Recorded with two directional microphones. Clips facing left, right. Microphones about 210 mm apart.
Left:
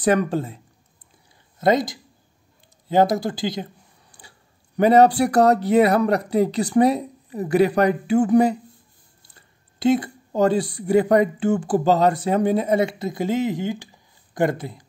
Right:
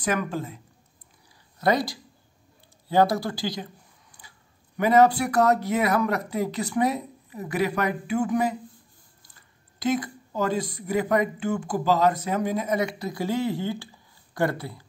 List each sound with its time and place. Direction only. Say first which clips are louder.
0.0 s speech: left 7 dB; 35° left (ahead or behind)
1.6 s speech: left 4 dB; 20° left (ahead or behind)
4.7 s speech: left 4 dB; 30° left (ahead or behind)